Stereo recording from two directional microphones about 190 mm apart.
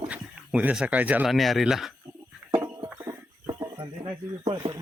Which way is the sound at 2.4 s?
20° right (ahead or behind).